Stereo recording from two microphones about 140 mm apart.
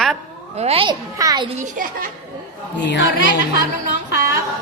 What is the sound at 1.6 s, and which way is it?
Speech, 75° right (ahead or behind).